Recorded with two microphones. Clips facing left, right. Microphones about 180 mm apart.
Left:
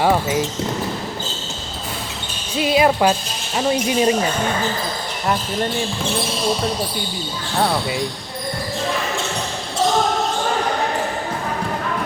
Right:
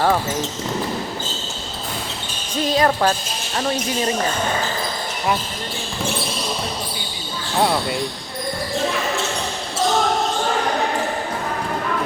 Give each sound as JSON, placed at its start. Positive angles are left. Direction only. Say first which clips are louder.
{"t": 0.0, "sound": "speech", "louder": "left 2 dB", "side_deg": 10}
{"t": 2.6, "sound": "speech", "louder": "left 2 dB", "side_deg": 10}
{"t": 7.6, "sound": "speech", "louder": "even", "side_deg": 0}